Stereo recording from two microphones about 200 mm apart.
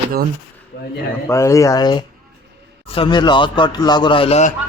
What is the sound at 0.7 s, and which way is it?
Speech, 60° left (ahead or behind).